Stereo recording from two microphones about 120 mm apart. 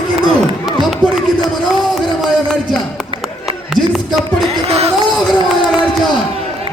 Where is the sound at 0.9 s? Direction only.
5° right (ahead or behind).